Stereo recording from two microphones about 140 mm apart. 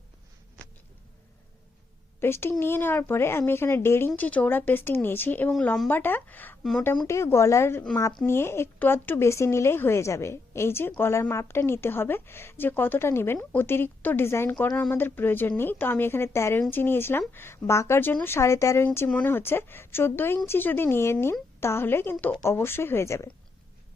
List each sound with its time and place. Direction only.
2.2 s a woman's voice: 15° left (ahead or behind)
5.9 s a woman's voice: 15° left (ahead or behind)
6.6 s speech: 5° left (ahead or behind)
6.9 s a woman's voice: 25° left (ahead or behind)
18.9 s a woman's voice: 10° left (ahead or behind)